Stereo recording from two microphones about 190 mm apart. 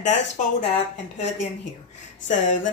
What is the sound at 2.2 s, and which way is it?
Speech, 40° left (ahead or behind).